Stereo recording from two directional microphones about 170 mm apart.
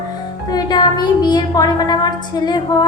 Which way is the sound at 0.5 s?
25° left (ahead or behind).